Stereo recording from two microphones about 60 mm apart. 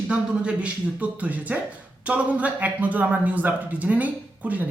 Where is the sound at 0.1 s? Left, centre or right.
Centre.